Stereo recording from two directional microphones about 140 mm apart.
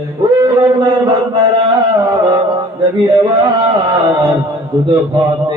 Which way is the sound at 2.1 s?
25° right (ahead or behind).